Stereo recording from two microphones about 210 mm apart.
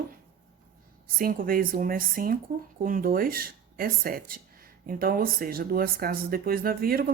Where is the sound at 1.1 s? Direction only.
45° right (ahead or behind).